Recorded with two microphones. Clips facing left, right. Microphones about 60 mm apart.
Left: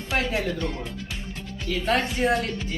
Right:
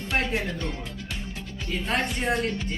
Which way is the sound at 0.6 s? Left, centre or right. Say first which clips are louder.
Left 3 dB; centre.